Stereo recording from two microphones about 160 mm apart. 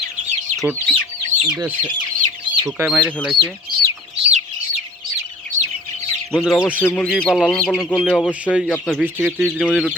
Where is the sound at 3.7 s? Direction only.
90° right.